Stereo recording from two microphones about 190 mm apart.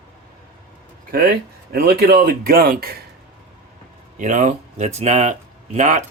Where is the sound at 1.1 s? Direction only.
50° right (ahead or behind).